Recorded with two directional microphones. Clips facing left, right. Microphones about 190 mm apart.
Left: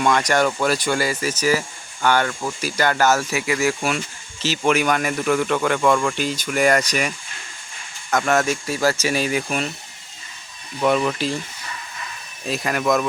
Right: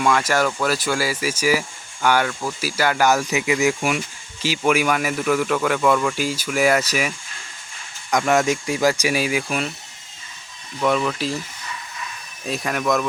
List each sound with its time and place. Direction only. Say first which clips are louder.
0.0 s speech: left 1 dB; 5° right (ahead or behind)
8.1 s speech: right 1 dB; 15° right (ahead or behind)
10.8 s speech: left 1 dB; 10° left (ahead or behind)
12.5 s speech: left 1 dB; centre (ahead or behind)